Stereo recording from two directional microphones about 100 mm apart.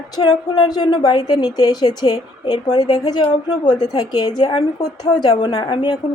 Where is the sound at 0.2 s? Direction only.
50° left (ahead or behind).